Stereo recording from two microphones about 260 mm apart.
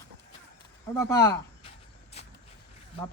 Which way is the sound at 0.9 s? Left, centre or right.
Centre.